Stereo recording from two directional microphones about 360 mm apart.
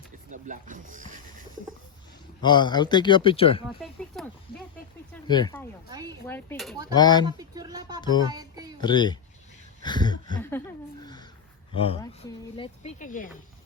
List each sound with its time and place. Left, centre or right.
0.3 s speech: right
2.4 s speech: centre
3.8 s oink: centre
5.1 s speech: centre
5.9 s a sound: centre
6.2 s speech: centre
7.3 s a sound: centre
8.3 s music: centre
8.8 s speech: centre
11.0 s a sound: centre
11.7 s speech: centre